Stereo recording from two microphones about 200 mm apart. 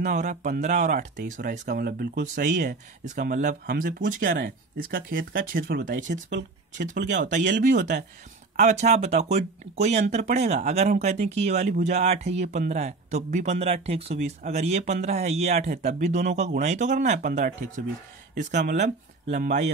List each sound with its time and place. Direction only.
0.0 s speech: 40° right (ahead or behind)
7.0 s speech: 60° right (ahead or behind)
7.6 s speech: 40° right (ahead or behind)
18.6 s speech: 55° right (ahead or behind)